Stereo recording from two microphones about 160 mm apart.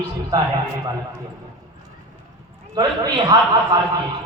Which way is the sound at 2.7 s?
25° right (ahead or behind).